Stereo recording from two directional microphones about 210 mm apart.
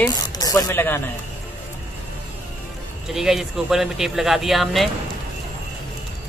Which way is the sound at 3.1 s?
Centre (ahead or behind).